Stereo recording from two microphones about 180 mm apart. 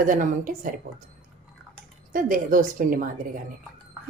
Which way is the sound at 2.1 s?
50° right (ahead or behind).